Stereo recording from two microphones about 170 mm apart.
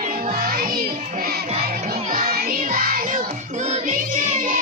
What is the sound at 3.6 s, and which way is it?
Music, 45° right (ahead or behind).